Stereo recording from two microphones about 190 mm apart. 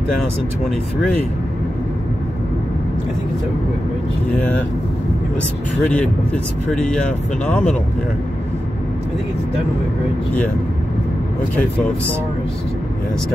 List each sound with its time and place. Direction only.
5.9 s speech: 5° left (ahead or behind)